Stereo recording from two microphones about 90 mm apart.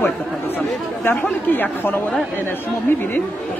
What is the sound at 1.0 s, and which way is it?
Speech, 20° left (ahead or behind).